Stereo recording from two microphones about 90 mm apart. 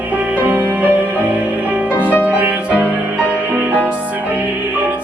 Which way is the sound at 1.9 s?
20° left (ahead or behind).